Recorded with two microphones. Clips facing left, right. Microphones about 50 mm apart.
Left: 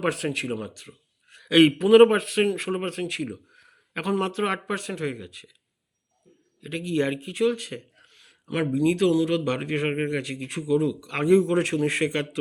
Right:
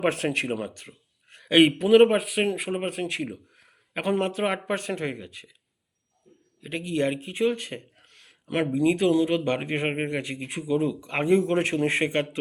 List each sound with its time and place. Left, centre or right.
0.0 s speech: right
0.6 s a sound: right
1.6 s a man's voice: centre
3.0 s speech: right
3.2 s a sound: centre
4.2 s speech: centre
4.7 s speech: right
6.6 s speech: centre
6.9 s a man's voice: centre
7.2 s speech: right
8.0 s a sound: right
8.4 s speech: right
8.7 s speech: centre